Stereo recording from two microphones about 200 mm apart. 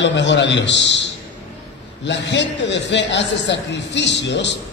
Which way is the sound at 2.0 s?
60° left (ahead or behind).